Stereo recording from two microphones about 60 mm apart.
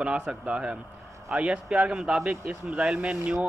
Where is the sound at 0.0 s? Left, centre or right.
Centre.